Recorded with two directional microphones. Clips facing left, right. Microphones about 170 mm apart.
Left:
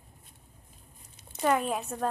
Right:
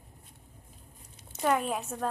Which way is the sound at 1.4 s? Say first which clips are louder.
Left 1 dB; centre (ahead or behind).